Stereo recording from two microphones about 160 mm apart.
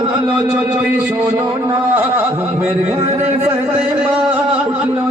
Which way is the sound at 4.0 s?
10° right (ahead or behind).